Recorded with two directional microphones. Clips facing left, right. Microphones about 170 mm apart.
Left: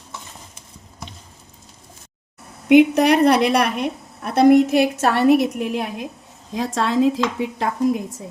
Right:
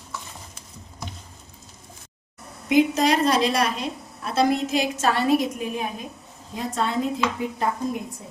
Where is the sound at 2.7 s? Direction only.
65° left (ahead or behind).